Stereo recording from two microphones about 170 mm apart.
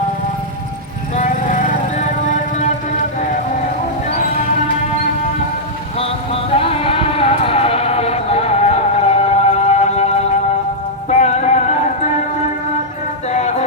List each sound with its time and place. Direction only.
1.1 s music: 45° left (ahead or behind)
6.0 s a sound: 35° left (ahead or behind)
11.1 s music: 45° left (ahead or behind)
13.3 s music: 40° left (ahead or behind)